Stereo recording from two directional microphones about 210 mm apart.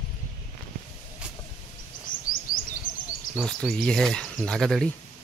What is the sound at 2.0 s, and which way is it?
Chirp, 40° left (ahead or behind).